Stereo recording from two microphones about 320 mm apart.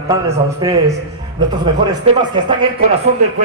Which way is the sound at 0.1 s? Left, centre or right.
Centre.